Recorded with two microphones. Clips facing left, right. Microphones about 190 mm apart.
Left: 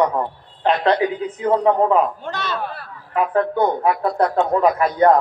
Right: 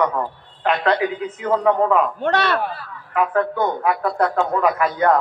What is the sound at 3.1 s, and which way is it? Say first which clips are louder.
A man's voice: left 1 dB; 30° left (ahead or behind).